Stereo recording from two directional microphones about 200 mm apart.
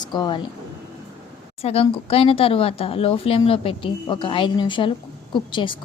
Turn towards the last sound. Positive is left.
turn(degrees=25)  # may be behind; listen again after turning